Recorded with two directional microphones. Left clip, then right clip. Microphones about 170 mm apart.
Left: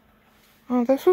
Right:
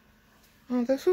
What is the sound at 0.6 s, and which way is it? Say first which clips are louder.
Speech: left 6 dB; 25° left (ahead or behind).